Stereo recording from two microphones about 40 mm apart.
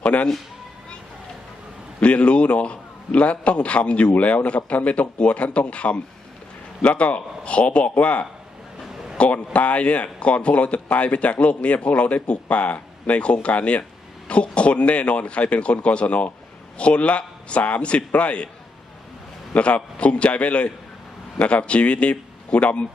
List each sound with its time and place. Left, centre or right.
0.0 s a sound: left
2.0 s a man's voice: left
19.5 s a man's voice: left